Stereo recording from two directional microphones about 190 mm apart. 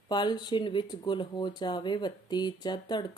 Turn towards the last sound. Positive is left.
turn(degrees=20)  # may be behind; listen again after turning